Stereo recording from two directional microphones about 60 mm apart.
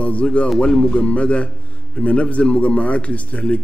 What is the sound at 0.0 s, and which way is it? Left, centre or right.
A man's voice, left.